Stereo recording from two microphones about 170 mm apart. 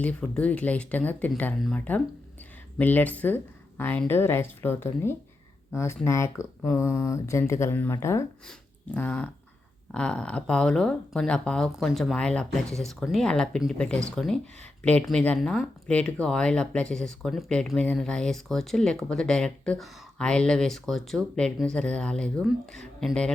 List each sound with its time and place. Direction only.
0.0 s speech: 10° left (ahead or behind)